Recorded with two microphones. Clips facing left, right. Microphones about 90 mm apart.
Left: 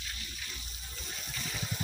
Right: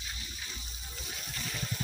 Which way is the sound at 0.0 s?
20° right (ahead or behind).